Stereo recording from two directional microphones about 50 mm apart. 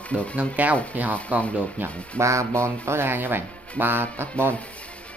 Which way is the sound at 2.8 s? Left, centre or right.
Right.